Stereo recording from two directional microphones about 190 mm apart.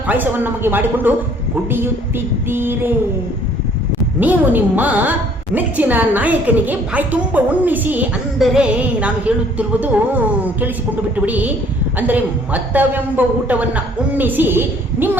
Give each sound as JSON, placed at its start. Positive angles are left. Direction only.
{"t": 0.1, "sound": "a woman's voice", "side_deg": -10}
{"t": 4.2, "sound": "a woman's voice", "side_deg": -10}